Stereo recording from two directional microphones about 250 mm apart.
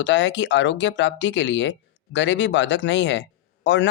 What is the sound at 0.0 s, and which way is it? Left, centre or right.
Speech, left.